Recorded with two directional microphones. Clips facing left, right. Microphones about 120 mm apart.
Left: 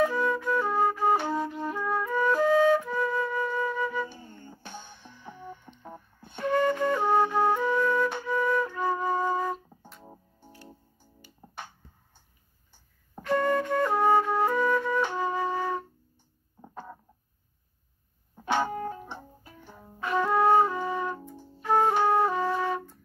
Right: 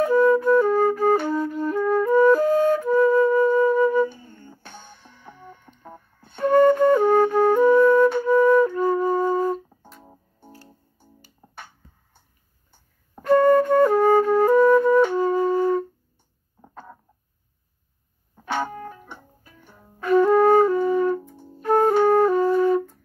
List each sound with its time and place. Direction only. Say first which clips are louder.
0.0 s flute: right 9 dB; 45° right (ahead or behind)
4.5 s music: left 2 dB; 15° left (ahead or behind)
5.8 s a sound: right 1 dB; 15° left (ahead or behind)
6.4 s flute: right 9 dB; 45° right (ahead or behind)
9.7 s music: right 1 dB; centre (ahead or behind)
11.0 s music: right 3 dB; 40° right (ahead or behind)
13.2 s flute: right 10 dB; 45° right (ahead or behind)
18.4 s music: even; 20° left (ahead or behind)
18.7 s music: left 3 dB; 30° left (ahead or behind)
20.0 s music: right 10 dB; 45° right (ahead or behind)
20.3 s flute: right 6 dB; 45° right (ahead or behind)